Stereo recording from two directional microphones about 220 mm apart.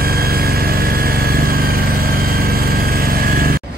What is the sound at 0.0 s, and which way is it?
Vehicle, 45° right (ahead or behind).